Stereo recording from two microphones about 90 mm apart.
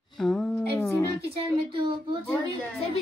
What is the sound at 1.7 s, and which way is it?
Speech, 65° right (ahead or behind).